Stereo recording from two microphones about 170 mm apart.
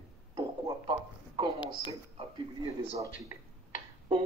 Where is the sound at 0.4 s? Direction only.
25° right (ahead or behind).